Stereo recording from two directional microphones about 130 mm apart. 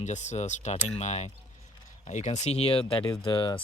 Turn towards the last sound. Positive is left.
turn(degrees=35)  # may be behind; listen again after turning